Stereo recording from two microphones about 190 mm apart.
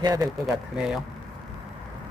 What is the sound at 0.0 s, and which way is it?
Speech, 20° right (ahead or behind).